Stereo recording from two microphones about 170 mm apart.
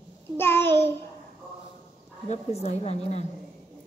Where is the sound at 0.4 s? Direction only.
15° left (ahead or behind).